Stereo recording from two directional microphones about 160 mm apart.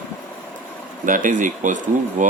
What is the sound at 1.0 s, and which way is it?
Speech, 55° right (ahead or behind).